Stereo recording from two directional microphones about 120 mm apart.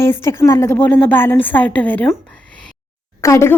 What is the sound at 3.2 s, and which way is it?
Speech, 25° left (ahead or behind).